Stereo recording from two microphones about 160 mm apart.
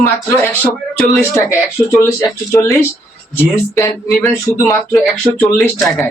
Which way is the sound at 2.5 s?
15° left (ahead or behind).